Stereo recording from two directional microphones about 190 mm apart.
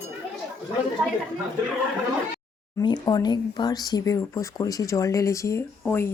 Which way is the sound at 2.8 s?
20° left (ahead or behind).